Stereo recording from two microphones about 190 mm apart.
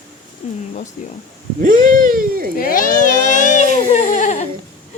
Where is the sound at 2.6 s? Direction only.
45° left (ahead or behind).